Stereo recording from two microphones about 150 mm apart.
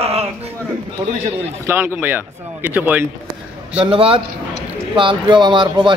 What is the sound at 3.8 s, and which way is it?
Speech, 35° right (ahead or behind).